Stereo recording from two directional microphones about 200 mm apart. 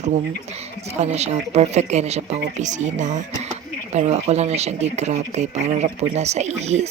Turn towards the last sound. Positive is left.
turn(degrees=-35)  # may be behind; listen again after turning